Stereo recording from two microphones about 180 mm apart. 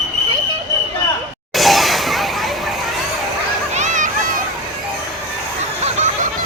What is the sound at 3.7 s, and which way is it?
Children playing, 45° right (ahead or behind).